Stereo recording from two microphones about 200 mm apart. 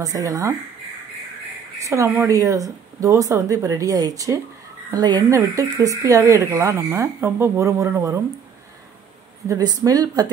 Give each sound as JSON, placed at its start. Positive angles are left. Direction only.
{"t": 0.0, "sound": "speech", "side_deg": -15}
{"t": 1.8, "sound": "speech", "side_deg": -15}
{"t": 9.5, "sound": "speech", "side_deg": -20}